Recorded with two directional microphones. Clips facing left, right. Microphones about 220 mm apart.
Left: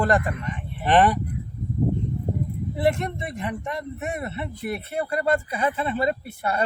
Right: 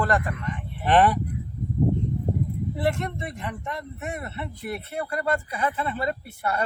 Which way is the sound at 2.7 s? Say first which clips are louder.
Left 4 dB; 15° left (ahead or behind).